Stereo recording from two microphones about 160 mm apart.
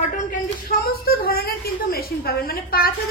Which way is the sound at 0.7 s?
70° left (ahead or behind).